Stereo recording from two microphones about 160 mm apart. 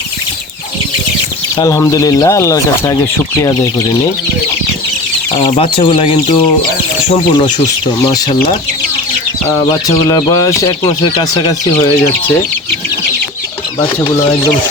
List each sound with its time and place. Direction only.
1.5 s speech: 20° left (ahead or behind)
5.3 s speech: 35° left (ahead or behind)
9.5 s speech: 20° left (ahead or behind)